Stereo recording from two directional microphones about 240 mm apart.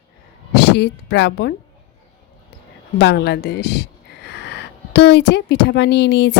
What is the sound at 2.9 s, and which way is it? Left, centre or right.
Speech, left.